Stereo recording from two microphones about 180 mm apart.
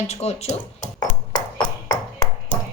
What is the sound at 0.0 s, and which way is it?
Speech, 35° left (ahead or behind).